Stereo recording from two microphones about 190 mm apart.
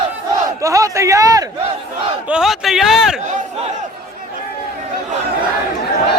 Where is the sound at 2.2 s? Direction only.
5° right (ahead or behind).